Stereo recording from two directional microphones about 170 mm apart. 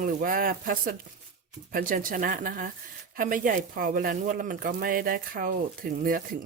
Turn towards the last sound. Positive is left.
turn(degrees=-60)  # may be behind; listen again after turning